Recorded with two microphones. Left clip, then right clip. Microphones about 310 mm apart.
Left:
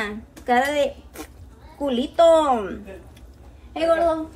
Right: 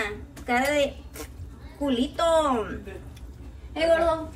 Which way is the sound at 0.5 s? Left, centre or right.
Left.